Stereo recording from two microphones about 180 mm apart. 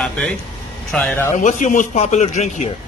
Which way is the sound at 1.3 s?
45° left (ahead or behind).